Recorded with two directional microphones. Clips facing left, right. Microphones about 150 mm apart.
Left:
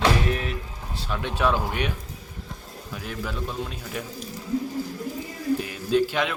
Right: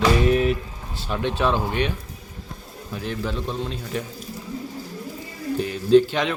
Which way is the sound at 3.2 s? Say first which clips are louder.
Right 2 dB; 25° right (ahead or behind).